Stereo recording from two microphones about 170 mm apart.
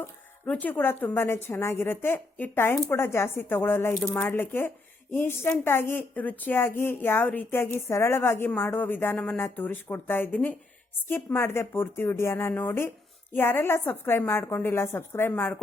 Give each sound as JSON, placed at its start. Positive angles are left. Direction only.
{"t": 0.4, "sound": "a woman's voice", "side_deg": 10}